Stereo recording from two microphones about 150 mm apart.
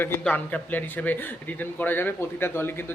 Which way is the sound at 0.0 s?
10° left (ahead or behind).